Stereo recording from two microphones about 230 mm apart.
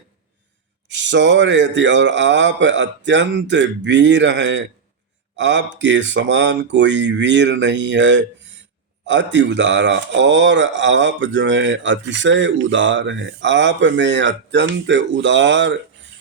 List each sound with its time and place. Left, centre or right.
0.9 s speech: right